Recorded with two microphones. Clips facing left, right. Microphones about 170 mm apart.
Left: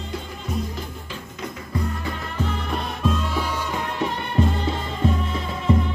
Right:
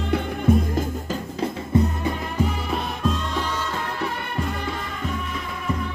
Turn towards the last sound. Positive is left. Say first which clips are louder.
# left 6 dB
turn(degrees=25)  # may be behind; listen again after turning